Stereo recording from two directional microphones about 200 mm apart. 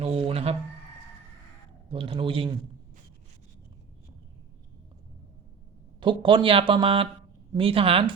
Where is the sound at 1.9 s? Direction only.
25° right (ahead or behind).